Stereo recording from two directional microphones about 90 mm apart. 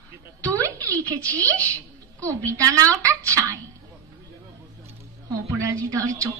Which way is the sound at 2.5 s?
40° right (ahead or behind).